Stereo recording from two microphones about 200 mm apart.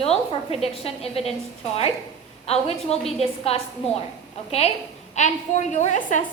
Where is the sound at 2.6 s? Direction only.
30° left (ahead or behind).